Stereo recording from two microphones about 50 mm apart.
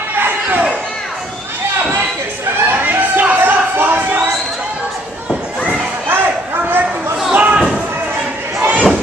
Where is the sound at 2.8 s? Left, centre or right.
Right.